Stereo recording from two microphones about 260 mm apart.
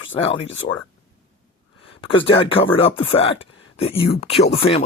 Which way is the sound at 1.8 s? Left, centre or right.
Left.